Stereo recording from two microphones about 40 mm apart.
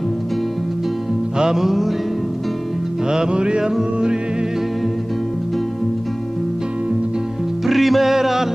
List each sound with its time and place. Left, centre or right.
1.4 s music: centre
3.1 s music: right
7.6 s music: centre